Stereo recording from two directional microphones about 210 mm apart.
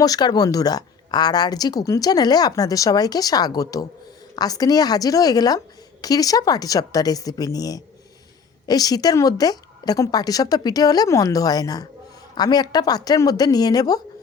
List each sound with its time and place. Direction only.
0.0 s speech: 20° left (ahead or behind)